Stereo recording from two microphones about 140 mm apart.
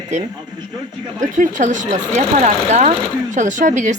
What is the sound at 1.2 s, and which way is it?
Speech, 65° right (ahead or behind).